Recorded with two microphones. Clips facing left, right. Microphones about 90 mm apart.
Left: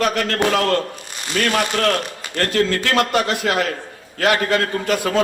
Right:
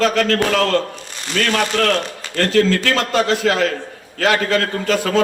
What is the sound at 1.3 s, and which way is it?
Speech, 30° left (ahead or behind).